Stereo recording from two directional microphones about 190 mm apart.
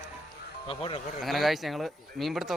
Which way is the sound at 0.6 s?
30° left (ahead or behind).